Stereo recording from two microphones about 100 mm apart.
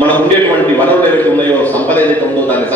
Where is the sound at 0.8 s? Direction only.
15° left (ahead or behind).